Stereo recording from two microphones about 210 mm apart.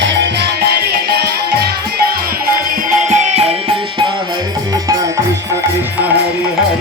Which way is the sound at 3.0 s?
30° right (ahead or behind).